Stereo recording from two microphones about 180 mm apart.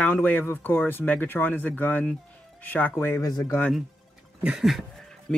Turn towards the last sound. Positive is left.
turn(degrees=0)  # may be behind; listen again after turning